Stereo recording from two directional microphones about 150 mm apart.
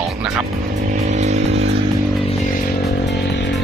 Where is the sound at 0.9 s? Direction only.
50° right (ahead or behind).